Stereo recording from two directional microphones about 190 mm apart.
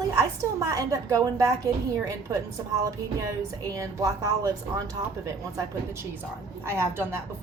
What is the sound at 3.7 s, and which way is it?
A woman's voice, 15° right (ahead or behind).